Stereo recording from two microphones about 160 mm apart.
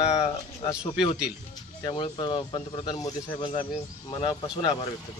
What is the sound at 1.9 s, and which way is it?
Speech, 30° left (ahead or behind).